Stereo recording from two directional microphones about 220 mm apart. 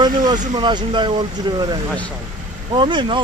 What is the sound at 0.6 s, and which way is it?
Speech, 20° right (ahead or behind).